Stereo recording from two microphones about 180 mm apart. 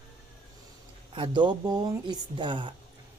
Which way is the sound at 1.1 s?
25° right (ahead or behind).